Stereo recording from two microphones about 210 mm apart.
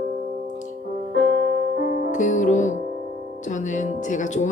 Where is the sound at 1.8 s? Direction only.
35° left (ahead or behind).